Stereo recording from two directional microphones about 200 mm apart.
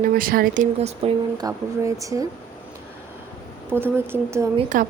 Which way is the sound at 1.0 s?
30° right (ahead or behind).